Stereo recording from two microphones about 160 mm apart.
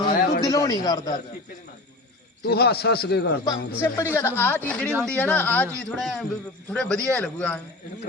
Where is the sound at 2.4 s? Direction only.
85° left.